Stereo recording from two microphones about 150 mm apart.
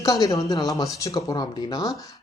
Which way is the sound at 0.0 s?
25° left (ahead or behind).